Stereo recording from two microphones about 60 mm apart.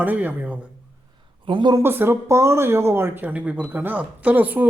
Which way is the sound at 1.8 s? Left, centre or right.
Right.